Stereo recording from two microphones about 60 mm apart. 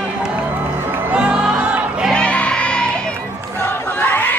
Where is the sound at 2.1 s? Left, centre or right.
Centre.